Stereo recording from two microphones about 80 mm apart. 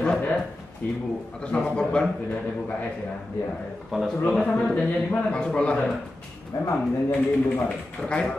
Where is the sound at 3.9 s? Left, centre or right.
Centre.